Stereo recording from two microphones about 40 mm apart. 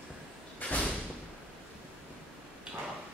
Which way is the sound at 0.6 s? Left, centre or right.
Left.